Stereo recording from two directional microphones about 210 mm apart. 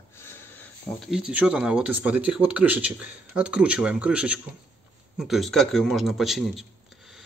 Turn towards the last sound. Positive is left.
turn(degrees=0)  # may be behind; listen again after turning